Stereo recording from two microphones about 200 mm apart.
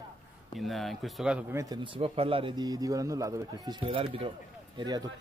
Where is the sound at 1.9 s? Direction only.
30° right (ahead or behind).